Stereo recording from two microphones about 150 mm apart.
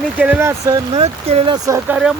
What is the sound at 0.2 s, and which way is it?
Speech, 15° right (ahead or behind).